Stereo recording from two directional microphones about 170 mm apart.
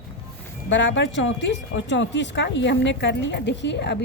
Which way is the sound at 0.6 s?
90° left.